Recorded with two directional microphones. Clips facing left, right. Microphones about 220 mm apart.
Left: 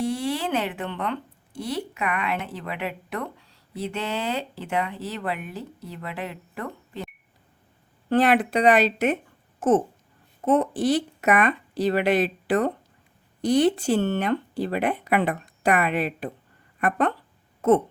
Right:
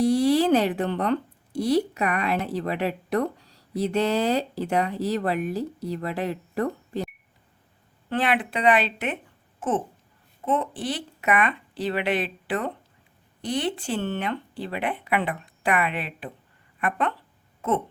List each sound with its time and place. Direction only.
0.0 s speech: 35° right (ahead or behind)
8.1 s speech: 40° left (ahead or behind)
9.6 s babbling: 45° left (ahead or behind)
10.4 s speech: 45° left (ahead or behind)